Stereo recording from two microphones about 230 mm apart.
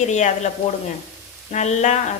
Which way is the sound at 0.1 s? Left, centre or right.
Left.